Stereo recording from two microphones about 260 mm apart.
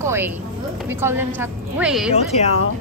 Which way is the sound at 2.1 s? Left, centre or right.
Left.